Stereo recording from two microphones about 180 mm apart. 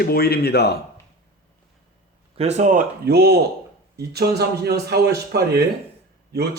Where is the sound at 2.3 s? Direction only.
35° right (ahead or behind).